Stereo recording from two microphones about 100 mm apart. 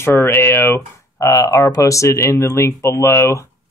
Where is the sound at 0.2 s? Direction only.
25° left (ahead or behind).